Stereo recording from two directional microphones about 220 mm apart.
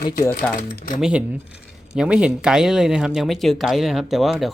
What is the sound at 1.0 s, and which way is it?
Speech, 5° right (ahead or behind).